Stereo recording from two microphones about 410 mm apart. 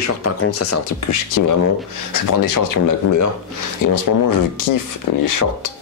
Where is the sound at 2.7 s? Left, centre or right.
Left.